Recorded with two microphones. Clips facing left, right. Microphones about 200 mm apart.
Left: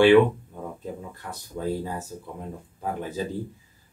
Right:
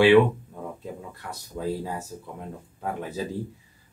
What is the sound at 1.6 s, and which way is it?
Speech, centre (ahead or behind).